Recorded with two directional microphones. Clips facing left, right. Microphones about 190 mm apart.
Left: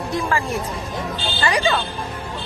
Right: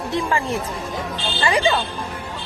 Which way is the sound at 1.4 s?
20° right (ahead or behind).